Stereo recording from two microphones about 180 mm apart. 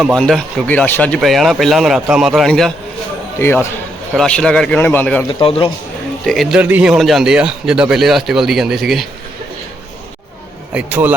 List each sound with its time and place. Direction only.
0.0 s a man's voice: centre (ahead or behind)
3.3 s a man's voice: 15° left (ahead or behind)
5.3 s a man's voice: 30° left (ahead or behind)
6.2 s a man's voice: centre (ahead or behind)
10.8 s a man's voice: 10° right (ahead or behind)